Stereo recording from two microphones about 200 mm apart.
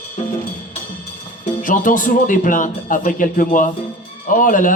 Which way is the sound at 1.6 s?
40° left (ahead or behind).